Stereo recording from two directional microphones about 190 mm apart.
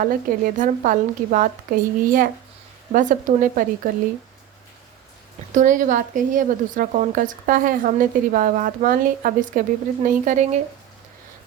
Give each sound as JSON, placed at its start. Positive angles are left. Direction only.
{"t": 0.0, "sound": "a woman's voice", "side_deg": -45}
{"t": 5.5, "sound": "a woman's voice", "side_deg": -40}